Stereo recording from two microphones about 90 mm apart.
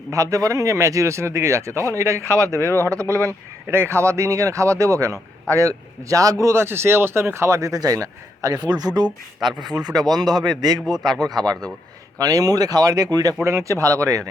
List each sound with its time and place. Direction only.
0.1 s speech: 35° right (ahead or behind)
2.6 s speech: 30° left (ahead or behind)
2.9 s speech: 40° right (ahead or behind)
3.7 s speech: 30° right (ahead or behind); by 9.0 s 50° right (ahead or behind)
9.0 s speech: centre (ahead or behind)
10.1 s speech: 50° right (ahead or behind)
13.4 s speech: 35° right (ahead or behind)